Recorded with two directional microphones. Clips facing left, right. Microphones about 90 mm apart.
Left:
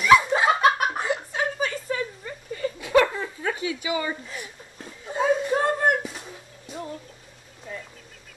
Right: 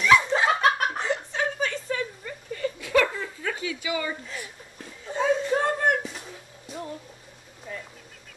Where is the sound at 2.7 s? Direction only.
25° left (ahead or behind).